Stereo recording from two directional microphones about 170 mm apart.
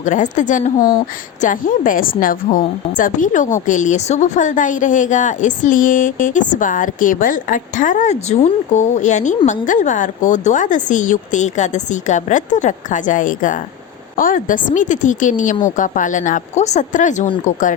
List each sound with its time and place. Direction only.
0.0 s a woman's voice: 45° left (ahead or behind)